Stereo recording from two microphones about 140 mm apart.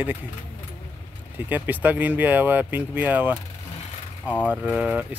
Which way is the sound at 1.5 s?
15° right (ahead or behind).